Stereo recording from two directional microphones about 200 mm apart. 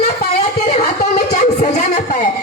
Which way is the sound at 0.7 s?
35° left (ahead or behind).